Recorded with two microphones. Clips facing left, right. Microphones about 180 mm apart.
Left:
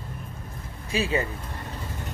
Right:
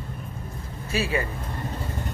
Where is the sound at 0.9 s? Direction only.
20° left (ahead or behind).